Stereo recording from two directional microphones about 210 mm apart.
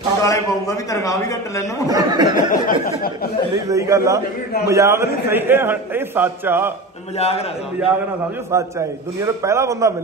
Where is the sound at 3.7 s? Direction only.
15° right (ahead or behind).